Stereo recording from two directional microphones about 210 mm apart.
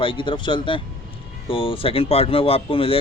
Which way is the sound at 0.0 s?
25° left (ahead or behind).